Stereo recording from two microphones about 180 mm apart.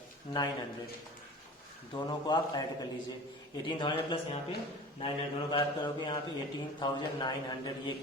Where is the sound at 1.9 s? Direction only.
25° left (ahead or behind).